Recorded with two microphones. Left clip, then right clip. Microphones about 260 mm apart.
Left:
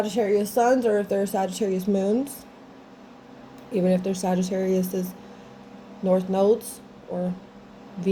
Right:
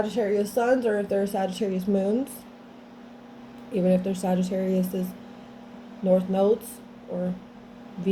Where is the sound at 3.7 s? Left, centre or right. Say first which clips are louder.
Left 1 dB; left.